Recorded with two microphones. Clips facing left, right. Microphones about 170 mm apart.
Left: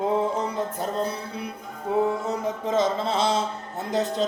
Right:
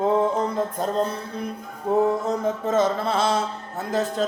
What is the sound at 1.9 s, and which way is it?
Music, 45° right (ahead or behind).